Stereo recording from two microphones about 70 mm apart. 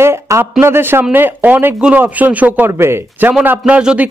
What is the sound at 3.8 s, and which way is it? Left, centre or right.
Speech, centre.